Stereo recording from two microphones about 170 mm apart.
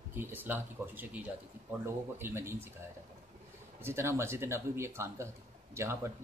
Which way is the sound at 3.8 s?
15° right (ahead or behind).